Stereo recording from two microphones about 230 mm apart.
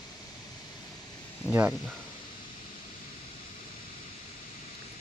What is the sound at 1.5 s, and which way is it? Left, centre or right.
Speech, centre.